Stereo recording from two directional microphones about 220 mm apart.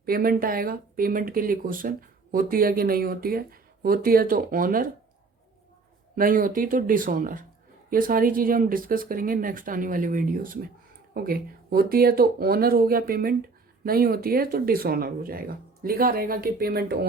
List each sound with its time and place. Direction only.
0.0 s speech: 40° right (ahead or behind)
6.1 s speech: 40° right (ahead or behind)